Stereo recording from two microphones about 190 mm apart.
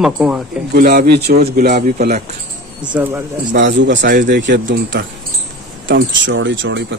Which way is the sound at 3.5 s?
70° right (ahead or behind).